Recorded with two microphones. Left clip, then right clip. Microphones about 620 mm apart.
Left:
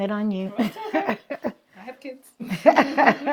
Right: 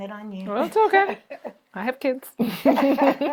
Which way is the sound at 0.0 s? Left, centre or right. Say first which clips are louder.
Left 9 dB; left.